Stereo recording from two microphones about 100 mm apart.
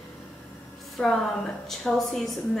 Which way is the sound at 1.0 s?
Centre (ahead or behind).